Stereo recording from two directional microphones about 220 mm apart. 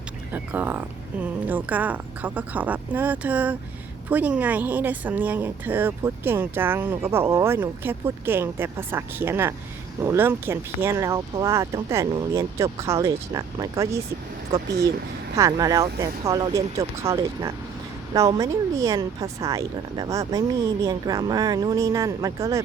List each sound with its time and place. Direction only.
0.3 s speech: 10° right (ahead or behind)